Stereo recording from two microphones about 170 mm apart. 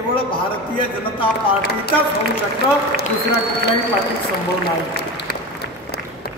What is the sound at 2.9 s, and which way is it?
Speech, 70° left (ahead or behind).